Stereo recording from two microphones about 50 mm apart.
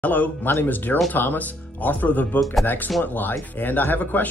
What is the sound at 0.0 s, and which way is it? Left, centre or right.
Speech, left.